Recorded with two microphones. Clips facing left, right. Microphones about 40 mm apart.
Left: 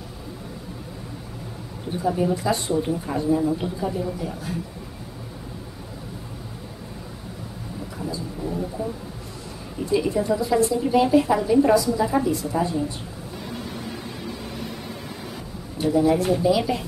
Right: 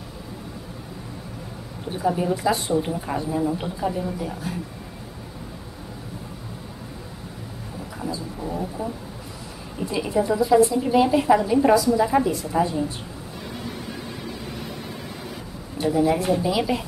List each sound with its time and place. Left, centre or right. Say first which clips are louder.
2.0 s speech: even; centre
8.0 s a sound: even; centre
9.8 s a woman's voice: left 1 dB; centre
15.8 s speech: left 1 dB; centre